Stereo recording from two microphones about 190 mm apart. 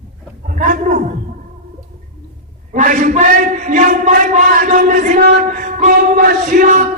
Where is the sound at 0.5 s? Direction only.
45° right (ahead or behind).